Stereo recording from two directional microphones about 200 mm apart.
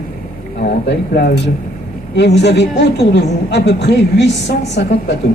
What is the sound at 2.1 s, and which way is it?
A woman's voice, 60° left (ahead or behind).